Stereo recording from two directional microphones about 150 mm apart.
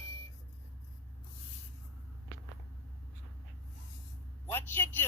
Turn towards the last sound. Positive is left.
turn(degrees=15)  # may be behind; listen again after turning